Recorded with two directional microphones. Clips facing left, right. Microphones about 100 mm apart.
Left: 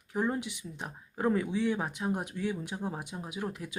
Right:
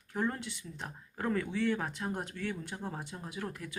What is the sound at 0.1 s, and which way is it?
Speech, 15° left (ahead or behind).